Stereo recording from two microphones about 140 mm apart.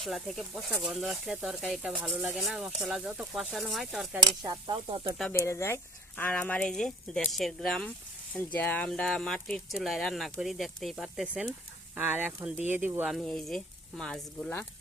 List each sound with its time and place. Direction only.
0.0 s speech: centre (ahead or behind)
4.4 s speech: 35° right (ahead or behind)
5.3 s speech: 20° left (ahead or behind); by 11.5 s 5° right (ahead or behind)
11.9 s speech: 15° right (ahead or behind)
13.1 s speech: centre (ahead or behind)